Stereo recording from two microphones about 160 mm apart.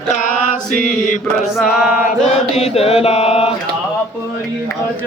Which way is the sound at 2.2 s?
40° left (ahead or behind).